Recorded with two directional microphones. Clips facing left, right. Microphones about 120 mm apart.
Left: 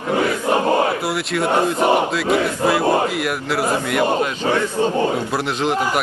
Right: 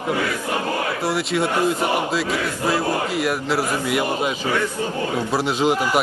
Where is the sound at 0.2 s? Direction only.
30° left (ahead or behind).